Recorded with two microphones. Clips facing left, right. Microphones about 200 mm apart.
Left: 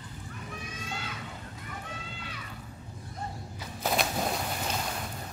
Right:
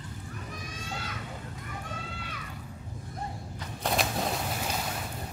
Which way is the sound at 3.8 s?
Centre (ahead or behind).